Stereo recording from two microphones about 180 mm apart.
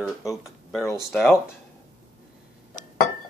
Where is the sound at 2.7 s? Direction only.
45° left (ahead or behind).